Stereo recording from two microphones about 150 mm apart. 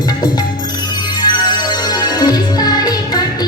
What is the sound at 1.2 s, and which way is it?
Music, 30° left (ahead or behind).